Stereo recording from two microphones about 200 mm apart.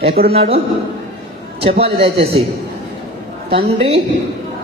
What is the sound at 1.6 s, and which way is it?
Speech, 30° right (ahead or behind).